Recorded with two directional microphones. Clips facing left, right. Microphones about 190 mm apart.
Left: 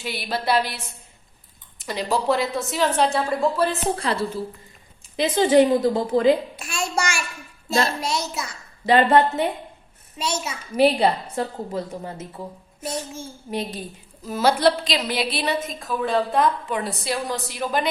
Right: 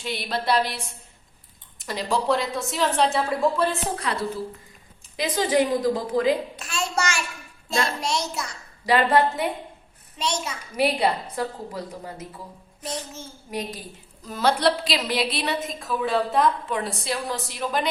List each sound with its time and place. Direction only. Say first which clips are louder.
0.0 s a woman's voice: left 1 dB; 5° left (ahead or behind)
1.8 s a woman's voice: left 2 dB; centre (ahead or behind)
3.9 s a woman's voice: left 3 dB; 30° left (ahead or behind)
6.6 s child singing: left 1 dB; 15° left (ahead or behind)
8.0 s a woman's voice: left 1 dB; centre (ahead or behind)
8.8 s a woman's voice: left 3 dB; 25° left (ahead or behind)
10.2 s a child's voice: left 1 dB; 5° left (ahead or behind)
10.8 s a woman's voice: left 4 dB; 30° left (ahead or behind)
12.8 s a child's voice: left 3 dB; 10° left (ahead or behind)
13.5 s a woman's voice: left 3 dB; 30° left (ahead or behind)
14.3 s a woman's voice: left 3 dB; 5° left (ahead or behind)